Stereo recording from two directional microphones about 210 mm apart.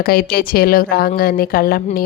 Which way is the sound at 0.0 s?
45° left (ahead or behind).